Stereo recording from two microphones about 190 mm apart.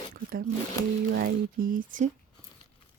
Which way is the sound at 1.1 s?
45° right (ahead or behind).